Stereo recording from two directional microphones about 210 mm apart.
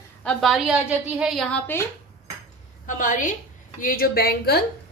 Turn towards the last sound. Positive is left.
turn(degrees=50)  # may be behind; listen again after turning